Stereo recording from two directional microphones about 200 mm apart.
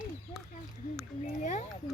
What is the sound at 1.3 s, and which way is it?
Speech, 35° left (ahead or behind).